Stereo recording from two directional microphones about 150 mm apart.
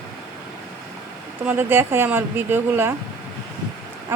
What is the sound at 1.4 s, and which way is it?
Speech, 10° right (ahead or behind).